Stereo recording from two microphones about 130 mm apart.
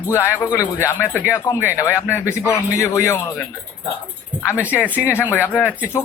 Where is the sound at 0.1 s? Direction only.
20° left (ahead or behind).